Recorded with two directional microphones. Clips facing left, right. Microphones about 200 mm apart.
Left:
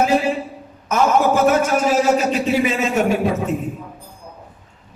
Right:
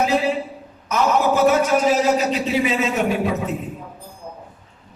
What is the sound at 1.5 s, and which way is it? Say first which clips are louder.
A man's voice: even; 50° left (ahead or behind).